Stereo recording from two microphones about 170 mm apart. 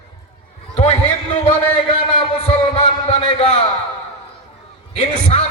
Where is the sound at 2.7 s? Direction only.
35° left (ahead or behind).